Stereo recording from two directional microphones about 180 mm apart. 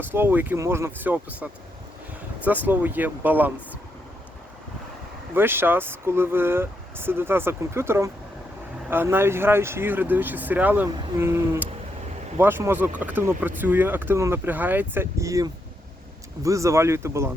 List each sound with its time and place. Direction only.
0.0 s speech: 10° right (ahead or behind)
5.3 s speech: 10° right (ahead or behind)